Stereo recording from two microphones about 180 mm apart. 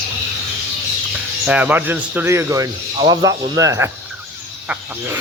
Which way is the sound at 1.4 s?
5° right (ahead or behind).